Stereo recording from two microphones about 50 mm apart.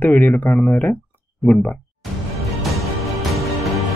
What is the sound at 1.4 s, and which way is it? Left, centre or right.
Speech, centre.